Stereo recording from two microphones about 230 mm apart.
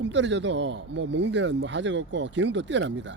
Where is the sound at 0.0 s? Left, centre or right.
Right.